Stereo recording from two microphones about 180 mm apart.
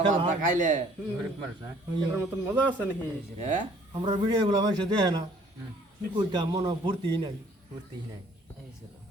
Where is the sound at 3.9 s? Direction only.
25° right (ahead or behind).